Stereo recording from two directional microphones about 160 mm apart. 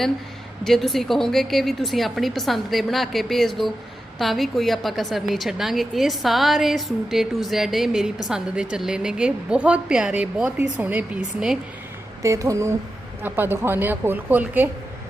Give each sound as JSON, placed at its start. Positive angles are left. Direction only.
{"t": 0.6, "sound": "a woman's voice", "side_deg": 0}
{"t": 12.2, "sound": "a woman's voice", "side_deg": -20}